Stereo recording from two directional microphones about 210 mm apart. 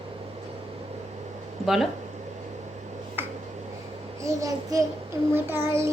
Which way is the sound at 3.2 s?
10° right (ahead or behind).